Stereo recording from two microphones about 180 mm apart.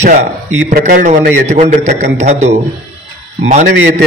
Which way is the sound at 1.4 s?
40° right (ahead or behind).